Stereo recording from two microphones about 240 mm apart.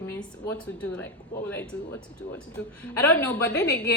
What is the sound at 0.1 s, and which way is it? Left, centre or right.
Speech, centre.